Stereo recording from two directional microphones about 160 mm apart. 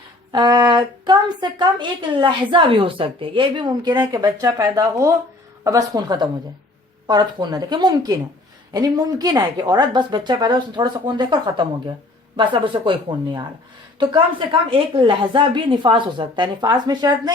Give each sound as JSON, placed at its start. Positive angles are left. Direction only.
{"t": 0.3, "sound": "a woman's voice", "side_deg": -25}